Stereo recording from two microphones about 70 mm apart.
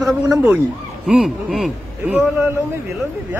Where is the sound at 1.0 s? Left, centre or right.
Centre.